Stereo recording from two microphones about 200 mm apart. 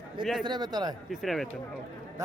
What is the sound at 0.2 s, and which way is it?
Speech, centre (ahead or behind).